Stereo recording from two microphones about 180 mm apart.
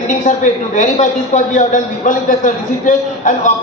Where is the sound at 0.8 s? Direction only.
45° left (ahead or behind).